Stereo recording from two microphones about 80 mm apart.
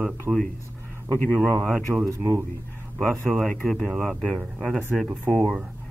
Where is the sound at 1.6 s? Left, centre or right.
Centre.